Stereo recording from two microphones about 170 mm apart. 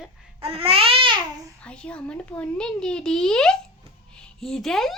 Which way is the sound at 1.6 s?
5° left (ahead or behind).